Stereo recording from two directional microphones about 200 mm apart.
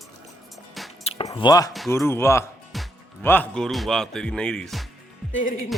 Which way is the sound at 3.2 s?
10° left (ahead or behind).